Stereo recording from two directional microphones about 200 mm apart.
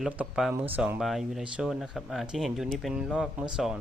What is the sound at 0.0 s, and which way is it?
Speech, 5° right (ahead or behind).